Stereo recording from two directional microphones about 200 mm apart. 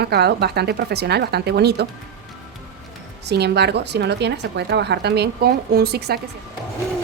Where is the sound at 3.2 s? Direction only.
55° right (ahead or behind).